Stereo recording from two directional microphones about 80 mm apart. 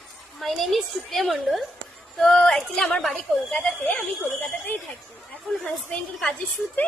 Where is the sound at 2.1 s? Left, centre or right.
Centre.